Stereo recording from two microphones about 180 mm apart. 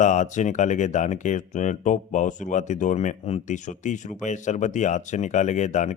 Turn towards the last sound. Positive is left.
turn(degrees=40)  # may be behind; listen again after turning